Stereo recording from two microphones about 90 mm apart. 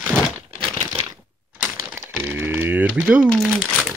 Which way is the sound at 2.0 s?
20° right (ahead or behind).